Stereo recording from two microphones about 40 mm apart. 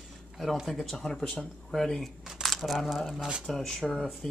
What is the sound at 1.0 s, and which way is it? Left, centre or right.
Speech, centre.